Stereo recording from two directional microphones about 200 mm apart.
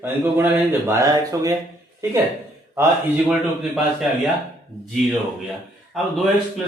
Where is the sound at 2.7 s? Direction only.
10° right (ahead or behind).